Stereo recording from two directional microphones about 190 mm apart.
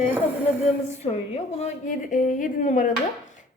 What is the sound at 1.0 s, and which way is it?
A woman's voice, 30° left (ahead or behind).